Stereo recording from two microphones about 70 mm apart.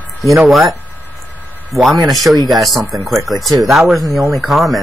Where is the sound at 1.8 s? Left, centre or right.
Centre.